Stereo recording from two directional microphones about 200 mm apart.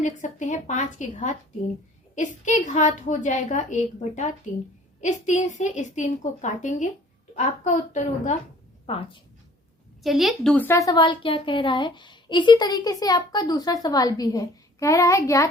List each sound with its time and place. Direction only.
0.0 s a woman's voice: 35° left (ahead or behind)
8.9 s a woman's voice: 25° left (ahead or behind)
10.0 s a woman's voice: centre (ahead or behind); by 15.4 s 15° left (ahead or behind)